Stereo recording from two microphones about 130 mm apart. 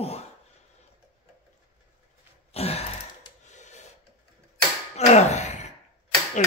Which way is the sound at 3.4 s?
65° left (ahead or behind).